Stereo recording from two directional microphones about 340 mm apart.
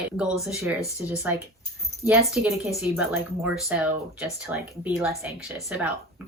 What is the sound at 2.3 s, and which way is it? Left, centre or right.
Speech, centre.